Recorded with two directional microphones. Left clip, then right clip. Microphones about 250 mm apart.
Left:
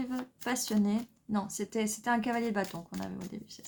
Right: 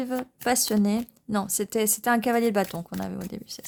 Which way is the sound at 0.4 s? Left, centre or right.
Right.